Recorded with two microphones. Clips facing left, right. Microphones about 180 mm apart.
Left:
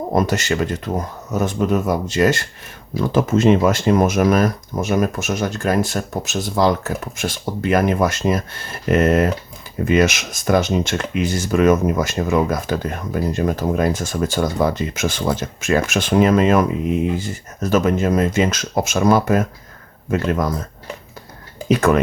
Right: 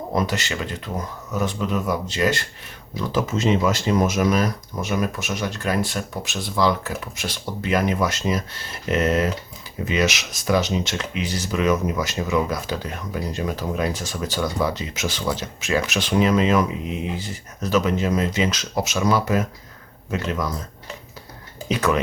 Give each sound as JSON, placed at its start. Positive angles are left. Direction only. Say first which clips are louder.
{"t": 0.1, "sound": "speech", "louder": "left 5 dB", "side_deg": 45}
{"t": 21.7, "sound": "speech", "louder": "left 6 dB", "side_deg": 50}